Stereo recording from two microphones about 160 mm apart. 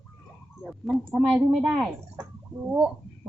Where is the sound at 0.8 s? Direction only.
10° right (ahead or behind).